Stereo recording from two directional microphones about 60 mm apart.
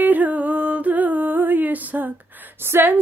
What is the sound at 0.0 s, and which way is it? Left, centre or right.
Music, right.